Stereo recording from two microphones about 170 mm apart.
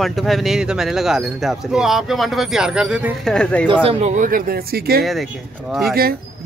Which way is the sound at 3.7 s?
35° right (ahead or behind).